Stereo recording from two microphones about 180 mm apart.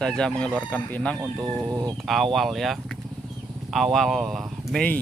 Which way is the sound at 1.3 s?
20° right (ahead or behind).